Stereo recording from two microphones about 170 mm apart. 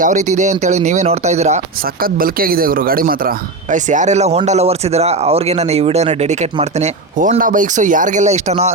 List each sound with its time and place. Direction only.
0.0 s speech: 45° right (ahead or behind)
2.0 s speech: 60° right (ahead or behind); by 8.7 s 40° right (ahead or behind)